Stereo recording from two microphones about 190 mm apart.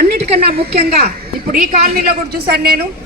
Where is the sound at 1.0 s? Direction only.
50° right (ahead or behind).